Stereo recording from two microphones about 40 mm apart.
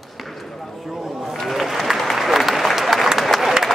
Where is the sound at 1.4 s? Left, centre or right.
Centre.